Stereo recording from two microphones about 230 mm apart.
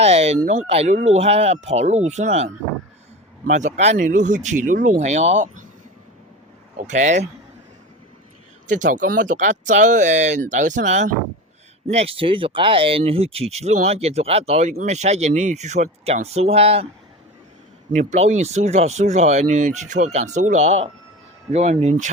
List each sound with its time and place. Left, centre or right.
0.0 s speech: right
6.8 s speech: right
8.6 s speech: right
17.9 s speech: right